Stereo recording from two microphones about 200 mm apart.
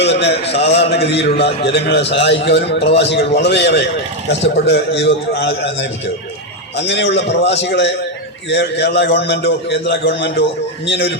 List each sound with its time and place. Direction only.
0.0 s a man's voice: 60° left (ahead or behind)
0.4 s a man's voice: 30° left (ahead or behind)
0.9 s a man's voice: 55° left (ahead or behind)